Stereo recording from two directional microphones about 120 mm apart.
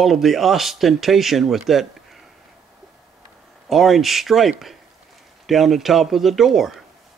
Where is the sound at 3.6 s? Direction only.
Centre (ahead or behind).